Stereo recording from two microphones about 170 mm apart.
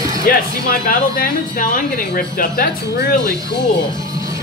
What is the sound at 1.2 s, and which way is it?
Speech, 55° left (ahead or behind).